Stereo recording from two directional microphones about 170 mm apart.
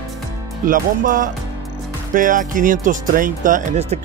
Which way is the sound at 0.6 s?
50° right (ahead or behind).